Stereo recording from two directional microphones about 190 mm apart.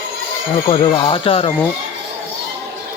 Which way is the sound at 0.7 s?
30° left (ahead or behind).